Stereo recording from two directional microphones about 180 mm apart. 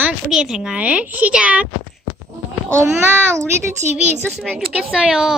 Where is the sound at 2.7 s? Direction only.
15° right (ahead or behind).